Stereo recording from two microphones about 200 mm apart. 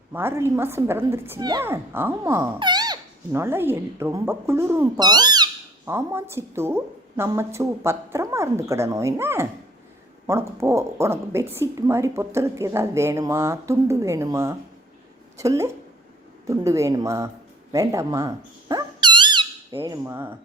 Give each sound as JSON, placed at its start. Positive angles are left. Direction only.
{"t": 0.1, "sound": "a woman's voice", "side_deg": -10}